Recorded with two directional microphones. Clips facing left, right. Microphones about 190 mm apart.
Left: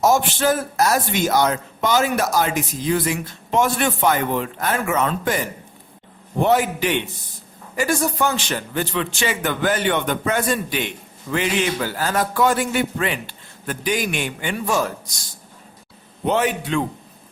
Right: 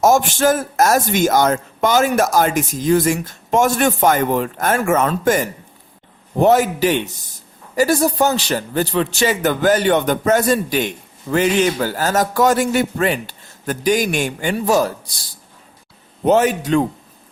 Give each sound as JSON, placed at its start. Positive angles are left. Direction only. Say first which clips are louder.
{"t": 0.0, "sound": "a man's voice", "louder": "right 4 dB", "side_deg": -45}
{"t": 16.2, "sound": "a man's voice", "louder": "right 6 dB", "side_deg": -40}